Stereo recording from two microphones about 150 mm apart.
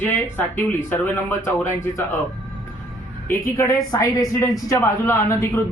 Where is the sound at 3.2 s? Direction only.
20° left (ahead or behind).